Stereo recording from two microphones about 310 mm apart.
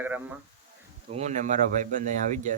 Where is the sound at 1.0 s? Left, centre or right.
Right.